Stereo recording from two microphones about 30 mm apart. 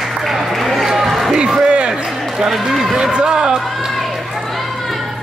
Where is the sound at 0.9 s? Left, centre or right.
Centre.